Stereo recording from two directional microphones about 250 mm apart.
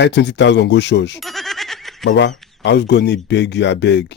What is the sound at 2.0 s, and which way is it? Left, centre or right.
Speech, left.